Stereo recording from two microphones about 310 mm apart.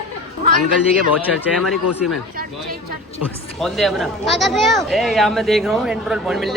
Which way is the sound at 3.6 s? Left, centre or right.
Centre.